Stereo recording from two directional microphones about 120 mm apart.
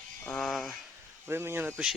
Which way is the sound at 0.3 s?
Centre (ahead or behind).